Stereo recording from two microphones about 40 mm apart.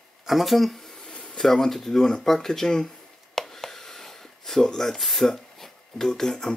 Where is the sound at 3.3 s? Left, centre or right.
Centre.